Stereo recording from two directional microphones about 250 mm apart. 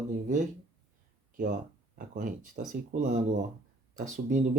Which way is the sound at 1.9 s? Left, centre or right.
Right.